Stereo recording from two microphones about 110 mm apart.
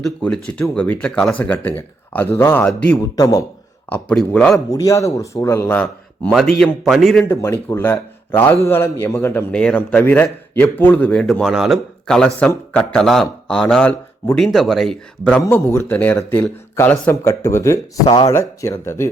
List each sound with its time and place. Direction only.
0.0 s speech: 10° left (ahead or behind)
4.3 s speech: 10° left (ahead or behind)
4.7 s speech: 30° left (ahead or behind); by 6.3 s 15° left (ahead or behind)
6.3 s a man's voice: 5° left (ahead or behind)
7.3 s speech: 25° left (ahead or behind)
9.5 s speech: 10° left (ahead or behind)
11.5 s a man's voice: 5° right (ahead or behind)
12.0 s a man's voice: 5° left (ahead or behind)
15.4 s speech: 20° left (ahead or behind)